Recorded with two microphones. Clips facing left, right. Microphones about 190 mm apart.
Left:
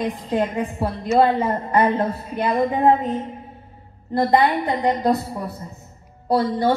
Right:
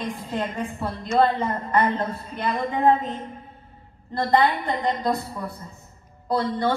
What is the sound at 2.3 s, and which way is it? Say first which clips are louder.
Speech: left 7 dB; 10° left (ahead or behind).